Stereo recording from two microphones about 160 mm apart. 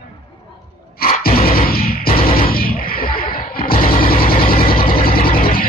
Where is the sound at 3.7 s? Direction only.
35° left (ahead or behind).